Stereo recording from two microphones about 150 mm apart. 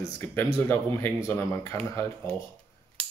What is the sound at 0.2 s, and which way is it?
Speech, 15° left (ahead or behind).